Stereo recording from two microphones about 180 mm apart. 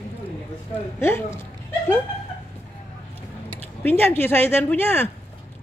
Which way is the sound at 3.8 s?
10° left (ahead or behind).